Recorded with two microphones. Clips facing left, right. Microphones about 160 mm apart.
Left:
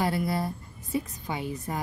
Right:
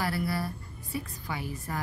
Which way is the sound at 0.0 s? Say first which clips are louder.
Left 3 dB; 20° left (ahead or behind).